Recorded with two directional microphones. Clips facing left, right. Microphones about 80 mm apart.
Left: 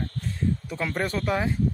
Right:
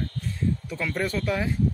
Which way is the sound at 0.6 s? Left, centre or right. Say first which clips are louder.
Even; left.